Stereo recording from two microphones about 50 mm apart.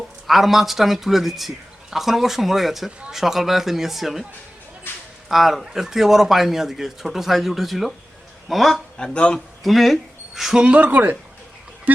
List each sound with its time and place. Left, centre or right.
0.3 s speech: centre
5.3 s speech: centre
9.1 s a man's voice: centre
9.6 s speech: centre
10.6 s speech: right